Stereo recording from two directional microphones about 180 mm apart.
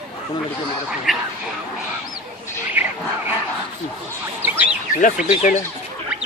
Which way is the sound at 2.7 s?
10° right (ahead or behind).